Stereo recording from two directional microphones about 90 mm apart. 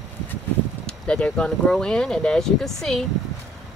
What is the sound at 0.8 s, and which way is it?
Speech, 10° left (ahead or behind).